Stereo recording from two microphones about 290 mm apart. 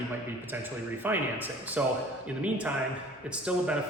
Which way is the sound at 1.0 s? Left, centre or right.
Centre.